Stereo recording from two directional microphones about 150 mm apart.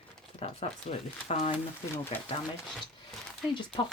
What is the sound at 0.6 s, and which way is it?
Speech, 40° left (ahead or behind).